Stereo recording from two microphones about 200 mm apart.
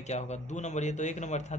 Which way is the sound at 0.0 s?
35° left (ahead or behind).